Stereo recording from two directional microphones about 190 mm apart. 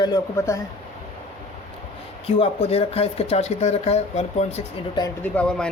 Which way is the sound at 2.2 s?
30° left (ahead or behind).